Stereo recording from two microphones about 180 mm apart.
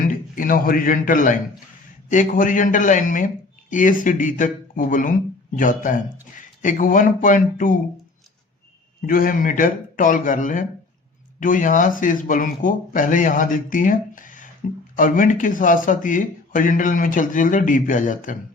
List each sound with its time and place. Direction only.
0.0 s a man's voice: 50° left (ahead or behind)
9.0 s speech: 50° left (ahead or behind)